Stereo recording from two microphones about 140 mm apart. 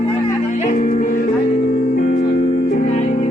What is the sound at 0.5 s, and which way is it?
Music, 60° left (ahead or behind).